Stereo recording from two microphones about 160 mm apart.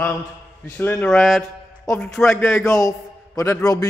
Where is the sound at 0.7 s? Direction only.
10° left (ahead or behind).